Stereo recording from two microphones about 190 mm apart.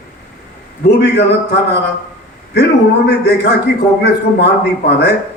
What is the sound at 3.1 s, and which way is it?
A man's voice, 60° left (ahead or behind).